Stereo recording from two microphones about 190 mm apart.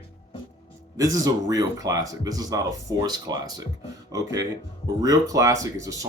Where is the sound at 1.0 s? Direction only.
20° right (ahead or behind).